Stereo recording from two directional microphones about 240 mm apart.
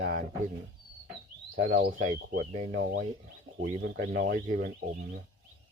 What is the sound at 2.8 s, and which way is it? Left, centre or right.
Speech, right.